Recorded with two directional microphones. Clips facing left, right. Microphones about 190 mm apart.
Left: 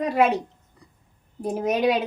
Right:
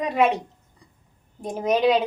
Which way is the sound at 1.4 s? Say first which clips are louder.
Left 3 dB; 5° left (ahead or behind).